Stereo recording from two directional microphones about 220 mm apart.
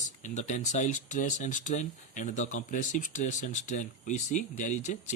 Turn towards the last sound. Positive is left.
turn(degrees=35)  # may be behind; listen again after turning